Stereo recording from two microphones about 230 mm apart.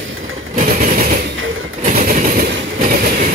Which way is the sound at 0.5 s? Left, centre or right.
Right.